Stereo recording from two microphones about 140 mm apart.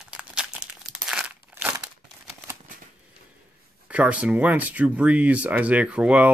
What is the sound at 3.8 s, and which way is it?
Speech, 10° right (ahead or behind).